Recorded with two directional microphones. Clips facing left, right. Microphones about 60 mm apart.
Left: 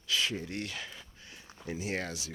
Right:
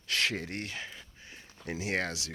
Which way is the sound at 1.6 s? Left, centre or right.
Right.